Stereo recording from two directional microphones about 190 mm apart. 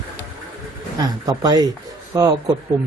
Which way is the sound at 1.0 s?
20° right (ahead or behind).